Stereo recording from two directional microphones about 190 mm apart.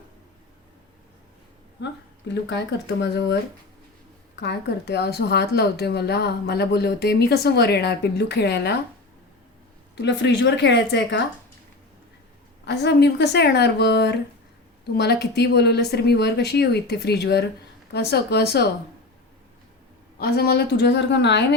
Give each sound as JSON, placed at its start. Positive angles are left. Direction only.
{"t": 1.8, "sound": "a woman's voice", "side_deg": 65}
{"t": 4.4, "sound": "a woman's voice", "side_deg": 60}
{"t": 9.9, "sound": "a woman's voice", "side_deg": 65}
{"t": 12.6, "sound": "a woman's voice", "side_deg": 60}
{"t": 20.1, "sound": "a woman's voice", "side_deg": 55}